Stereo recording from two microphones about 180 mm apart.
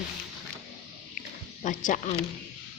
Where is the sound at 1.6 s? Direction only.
45° left (ahead or behind).